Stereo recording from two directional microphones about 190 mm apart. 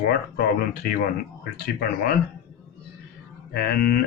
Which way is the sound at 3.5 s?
55° left (ahead or behind).